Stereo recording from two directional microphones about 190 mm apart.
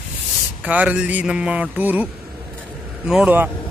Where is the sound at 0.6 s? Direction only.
5° right (ahead or behind).